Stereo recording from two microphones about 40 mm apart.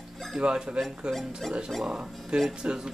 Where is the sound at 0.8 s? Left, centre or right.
Centre.